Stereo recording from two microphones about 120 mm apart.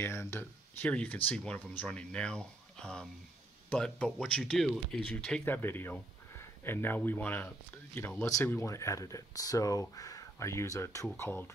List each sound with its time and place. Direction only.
0.0 s speech: 20° left (ahead or behind)
5.4 s speech: 20° left (ahead or behind)